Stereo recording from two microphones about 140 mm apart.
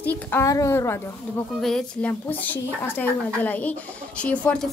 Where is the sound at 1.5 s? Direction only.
5° left (ahead or behind).